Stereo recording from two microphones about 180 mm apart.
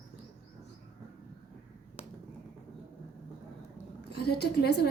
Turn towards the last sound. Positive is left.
turn(degrees=65)  # may be behind; listen again after turning